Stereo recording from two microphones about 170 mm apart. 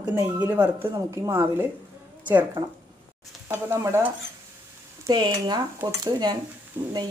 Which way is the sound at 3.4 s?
15° right (ahead or behind).